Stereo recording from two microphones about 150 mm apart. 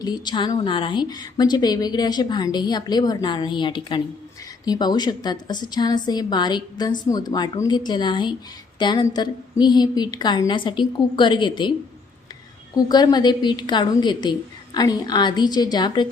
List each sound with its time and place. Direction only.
0.0 s a woman's voice: 30° left (ahead or behind)
12.7 s a woman's voice: 25° left (ahead or behind)